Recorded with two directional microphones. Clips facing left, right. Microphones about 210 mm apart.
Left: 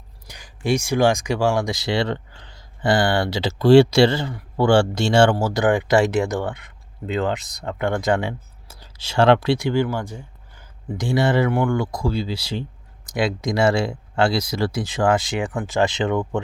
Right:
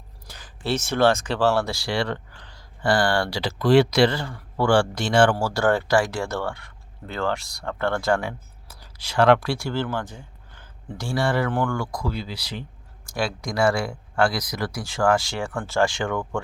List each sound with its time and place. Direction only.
0.3 s speech: 15° left (ahead or behind)